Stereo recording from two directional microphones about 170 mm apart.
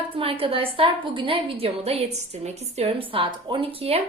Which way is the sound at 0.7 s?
30° right (ahead or behind).